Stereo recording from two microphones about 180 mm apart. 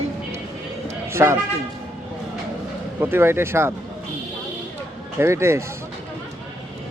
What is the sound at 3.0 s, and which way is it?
Speech, 15° right (ahead or behind).